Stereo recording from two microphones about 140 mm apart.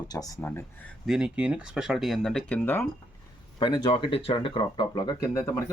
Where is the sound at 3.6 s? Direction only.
30° left (ahead or behind).